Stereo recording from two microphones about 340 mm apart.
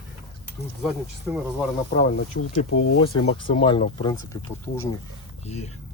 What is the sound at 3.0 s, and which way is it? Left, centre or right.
Speech, centre.